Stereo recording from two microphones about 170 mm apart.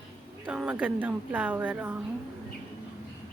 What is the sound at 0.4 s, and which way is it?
A woman's voice, 5° right (ahead or behind).